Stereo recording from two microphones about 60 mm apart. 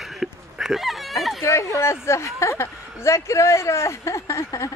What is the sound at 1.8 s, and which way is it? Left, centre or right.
A man's voice, left.